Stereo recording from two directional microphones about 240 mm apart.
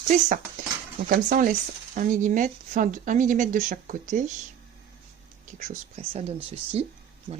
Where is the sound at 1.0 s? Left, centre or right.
Right.